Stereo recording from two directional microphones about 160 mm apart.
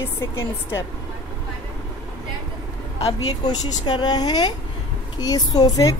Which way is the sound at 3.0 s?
30° left (ahead or behind).